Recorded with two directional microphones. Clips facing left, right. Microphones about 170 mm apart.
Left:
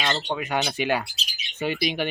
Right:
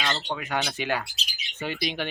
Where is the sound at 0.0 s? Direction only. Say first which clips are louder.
Left 3 dB; 20° left (ahead or behind).